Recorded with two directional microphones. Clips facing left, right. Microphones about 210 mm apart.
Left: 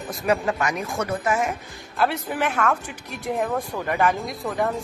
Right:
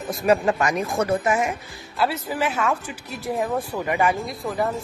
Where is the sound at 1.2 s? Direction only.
15° right (ahead or behind).